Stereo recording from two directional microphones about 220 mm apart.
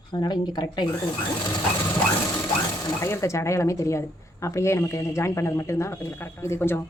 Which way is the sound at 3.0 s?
10° left (ahead or behind).